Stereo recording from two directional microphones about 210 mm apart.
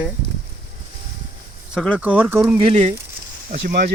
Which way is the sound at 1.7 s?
Centre (ahead or behind).